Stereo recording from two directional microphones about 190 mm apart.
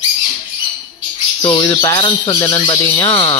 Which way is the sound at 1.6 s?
15° left (ahead or behind).